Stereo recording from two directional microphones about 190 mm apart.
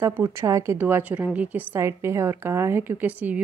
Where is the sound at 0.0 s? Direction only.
15° right (ahead or behind).